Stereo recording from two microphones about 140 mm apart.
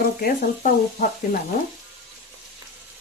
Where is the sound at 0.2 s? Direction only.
80° left.